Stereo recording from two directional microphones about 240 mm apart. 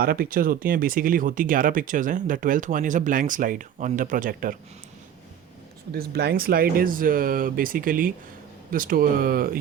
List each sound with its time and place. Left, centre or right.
0.0 s speech: right
5.9 s speech: right